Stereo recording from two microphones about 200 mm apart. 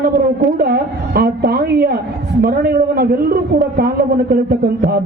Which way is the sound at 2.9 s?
50° right (ahead or behind).